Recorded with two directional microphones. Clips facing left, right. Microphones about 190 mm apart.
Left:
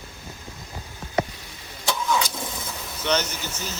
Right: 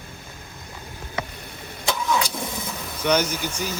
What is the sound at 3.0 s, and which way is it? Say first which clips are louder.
Speech: right 4 dB; 10° right (ahead or behind).